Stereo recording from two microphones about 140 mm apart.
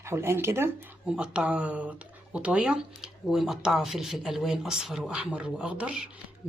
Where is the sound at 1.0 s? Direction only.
5° right (ahead or behind).